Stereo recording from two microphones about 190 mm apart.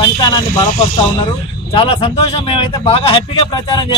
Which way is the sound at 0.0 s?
25° left (ahead or behind).